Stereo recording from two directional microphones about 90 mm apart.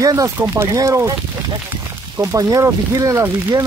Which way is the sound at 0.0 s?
40° right (ahead or behind).